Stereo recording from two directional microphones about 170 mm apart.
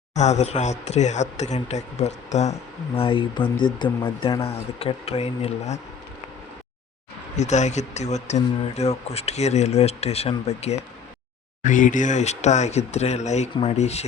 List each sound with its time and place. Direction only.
0.1 s speech: 45° left (ahead or behind)
7.3 s speech: 45° left (ahead or behind)